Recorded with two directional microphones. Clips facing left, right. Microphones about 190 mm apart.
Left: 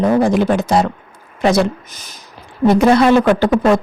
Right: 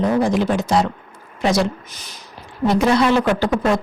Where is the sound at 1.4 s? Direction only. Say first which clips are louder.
Left 4 dB; 55° left (ahead or behind).